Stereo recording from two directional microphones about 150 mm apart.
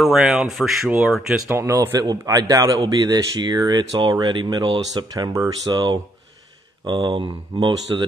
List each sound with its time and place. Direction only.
0.0 s speech: centre (ahead or behind)
1.6 s speech: 20° right (ahead or behind)